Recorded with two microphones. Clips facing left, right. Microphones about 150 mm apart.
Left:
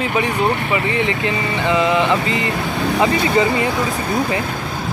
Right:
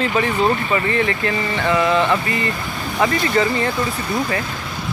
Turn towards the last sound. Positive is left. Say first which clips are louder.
# left 2 dB
turn(degrees=15)  # may be behind; listen again after turning